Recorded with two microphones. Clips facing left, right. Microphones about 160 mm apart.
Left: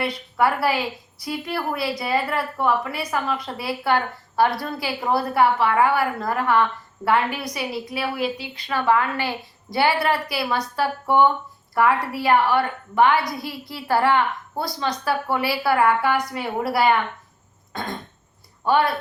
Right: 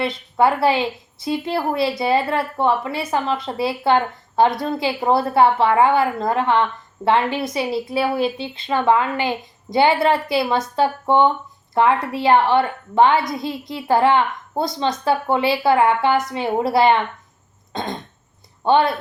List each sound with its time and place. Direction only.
0.0 s a woman's voice: 25° right (ahead or behind)
17.7 s cough: 20° right (ahead or behind)
18.6 s a woman's voice: 25° right (ahead or behind)